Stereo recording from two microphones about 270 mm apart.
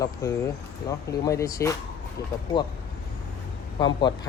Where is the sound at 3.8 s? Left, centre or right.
Centre.